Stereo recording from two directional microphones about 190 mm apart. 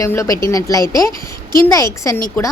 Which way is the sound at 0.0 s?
15° left (ahead or behind).